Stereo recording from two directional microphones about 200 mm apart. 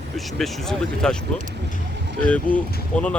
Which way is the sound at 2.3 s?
5° left (ahead or behind).